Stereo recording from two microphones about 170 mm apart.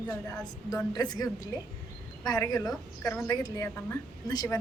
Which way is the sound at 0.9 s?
20° left (ahead or behind).